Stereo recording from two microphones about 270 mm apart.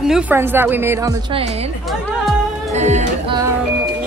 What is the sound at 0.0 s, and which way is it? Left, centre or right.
A woman's voice, centre.